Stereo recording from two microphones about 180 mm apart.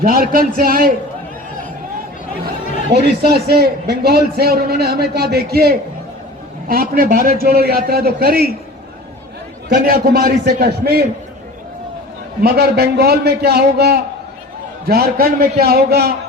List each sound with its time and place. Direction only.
0.0 s a man's voice: 55° right (ahead or behind)
2.9 s a man's voice: 60° right (ahead or behind)
9.6 s a man's voice: 60° right (ahead or behind)
12.4 s a man's voice: 60° right (ahead or behind)